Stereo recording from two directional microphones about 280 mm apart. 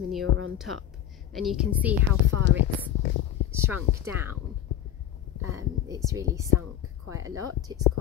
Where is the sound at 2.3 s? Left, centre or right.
Right.